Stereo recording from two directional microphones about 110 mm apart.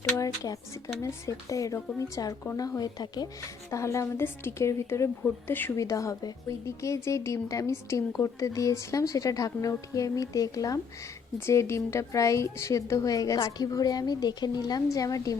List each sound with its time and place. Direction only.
0.2 s a woman's voice: 30° left (ahead or behind)
5.7 s a woman's voice: 30° left (ahead or behind)